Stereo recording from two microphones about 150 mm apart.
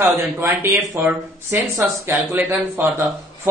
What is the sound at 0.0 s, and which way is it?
Speech, 15° right (ahead or behind).